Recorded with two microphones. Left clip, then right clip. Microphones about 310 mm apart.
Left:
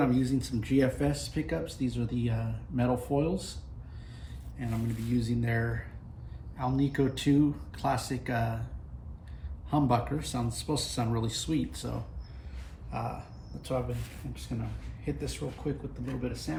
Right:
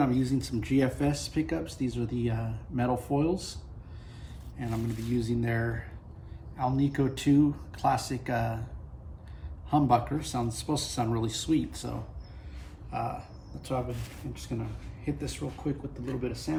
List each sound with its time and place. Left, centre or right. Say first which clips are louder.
0.0 s speech: even; centre
4.5 s speech: right 2 dB; centre
9.6 s speech: right 3 dB; centre